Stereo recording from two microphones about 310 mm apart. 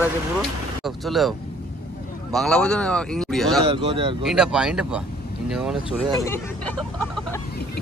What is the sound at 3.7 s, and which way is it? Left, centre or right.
Speech, centre.